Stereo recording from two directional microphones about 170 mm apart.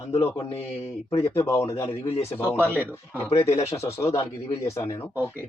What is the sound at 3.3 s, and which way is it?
Speech, 40° left (ahead or behind).